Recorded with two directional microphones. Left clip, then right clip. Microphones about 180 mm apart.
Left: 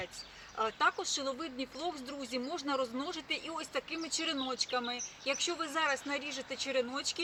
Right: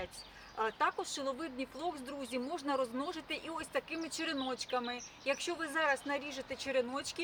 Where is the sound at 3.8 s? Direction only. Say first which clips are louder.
Left 2 dB; 40° right (ahead or behind).